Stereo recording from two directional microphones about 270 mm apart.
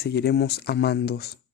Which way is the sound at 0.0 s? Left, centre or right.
Left.